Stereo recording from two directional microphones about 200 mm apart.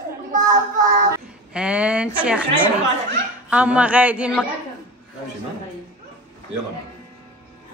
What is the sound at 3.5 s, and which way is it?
Speech, 5° right (ahead or behind).